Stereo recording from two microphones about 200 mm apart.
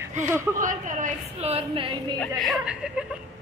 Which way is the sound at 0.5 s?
40° right (ahead or behind).